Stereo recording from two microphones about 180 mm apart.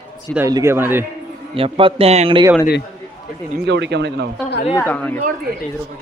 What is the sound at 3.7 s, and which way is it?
Speech, 75° right (ahead or behind).